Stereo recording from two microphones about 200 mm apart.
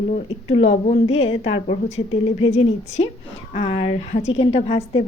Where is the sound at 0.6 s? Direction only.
35° left (ahead or behind).